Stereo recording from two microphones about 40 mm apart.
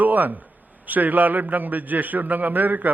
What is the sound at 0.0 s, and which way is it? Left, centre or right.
A man's voice, right.